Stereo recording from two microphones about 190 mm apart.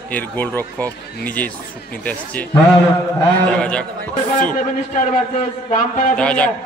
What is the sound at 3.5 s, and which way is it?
Speech, 5° left (ahead or behind).